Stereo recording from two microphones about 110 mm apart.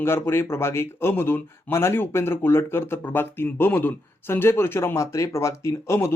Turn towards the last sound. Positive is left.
turn(degrees=25)  # may be behind; listen again after turning